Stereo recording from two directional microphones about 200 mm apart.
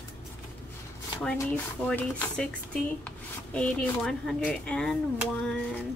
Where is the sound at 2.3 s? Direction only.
5° left (ahead or behind).